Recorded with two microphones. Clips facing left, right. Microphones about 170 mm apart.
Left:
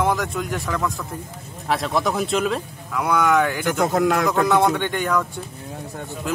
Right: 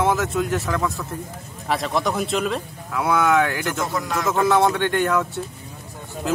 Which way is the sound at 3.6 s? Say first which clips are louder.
Left 6 dB; 60° left (ahead or behind).